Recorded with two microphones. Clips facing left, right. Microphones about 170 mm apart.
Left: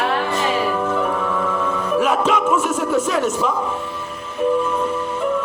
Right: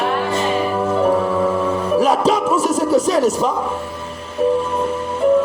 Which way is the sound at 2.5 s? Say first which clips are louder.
Right 3 dB; 35° right (ahead or behind).